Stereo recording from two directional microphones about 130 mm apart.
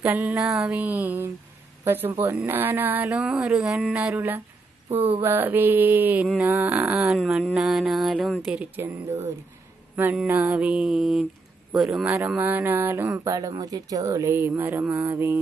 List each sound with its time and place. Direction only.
0.0 s mantra: 15° right (ahead or behind)
0.4 s music: 5° right (ahead or behind)
0.7 s mantra: 10° right (ahead or behind)
3.2 s music: 10° right (ahead or behind)
3.7 s mantra: 10° right (ahead or behind)
6.4 s speech: 20° right (ahead or behind)
6.8 s music: 5° right (ahead or behind)
8.5 s mantra: 15° right (ahead or behind)
10.2 s speech: 20° right (ahead or behind)
10.5 s music: 5° right (ahead or behind)
12.3 s speech: 15° right (ahead or behind)